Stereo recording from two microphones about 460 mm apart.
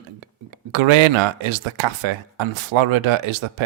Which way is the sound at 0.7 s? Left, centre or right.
Right.